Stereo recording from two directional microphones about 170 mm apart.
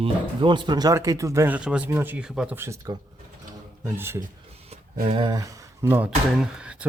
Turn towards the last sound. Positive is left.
turn(degrees=-5)  # may be behind; listen again after turning